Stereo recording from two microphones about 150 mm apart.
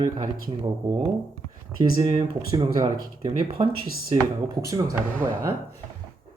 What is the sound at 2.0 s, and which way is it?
Speech, 40° right (ahead or behind).